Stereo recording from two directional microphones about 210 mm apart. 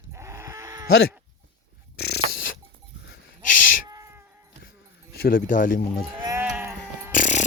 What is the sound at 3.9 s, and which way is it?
Cat, 15° right (ahead or behind).